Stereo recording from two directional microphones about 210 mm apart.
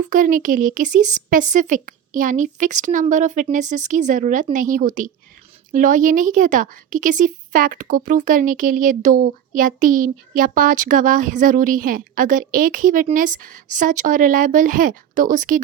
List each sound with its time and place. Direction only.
0.0 s a woman's voice: 40° right (ahead or behind)